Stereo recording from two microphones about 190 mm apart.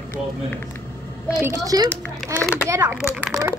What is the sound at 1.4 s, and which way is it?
Speech, 15° right (ahead or behind).